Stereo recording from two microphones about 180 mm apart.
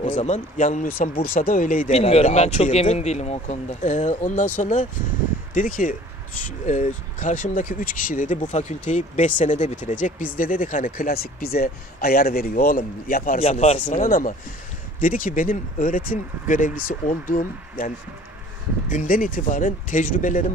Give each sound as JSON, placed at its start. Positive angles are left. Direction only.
{"t": 0.0, "sound": "speech", "side_deg": 40}
{"t": 1.9, "sound": "speech", "side_deg": 35}
{"t": 13.4, "sound": "speech", "side_deg": 35}